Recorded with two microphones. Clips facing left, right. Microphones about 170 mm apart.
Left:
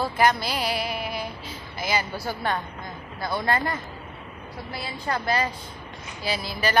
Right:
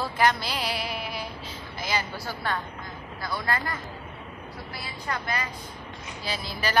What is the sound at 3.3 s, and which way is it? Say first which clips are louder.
Speech: left 5 dB; 25° left (ahead or behind).